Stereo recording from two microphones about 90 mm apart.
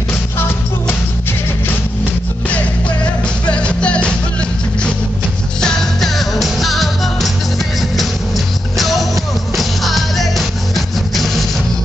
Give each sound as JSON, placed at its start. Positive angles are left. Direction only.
{"t": 0.4, "sound": "music", "side_deg": 25}
{"t": 3.4, "sound": "music", "side_deg": 10}
{"t": 5.6, "sound": "music", "side_deg": 5}
{"t": 8.7, "sound": "music", "side_deg": 0}